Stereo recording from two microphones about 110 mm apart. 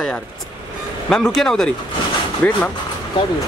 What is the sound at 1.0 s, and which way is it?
Speech, 5° left (ahead or behind).